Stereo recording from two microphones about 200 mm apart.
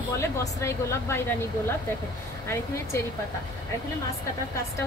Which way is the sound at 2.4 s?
15° left (ahead or behind).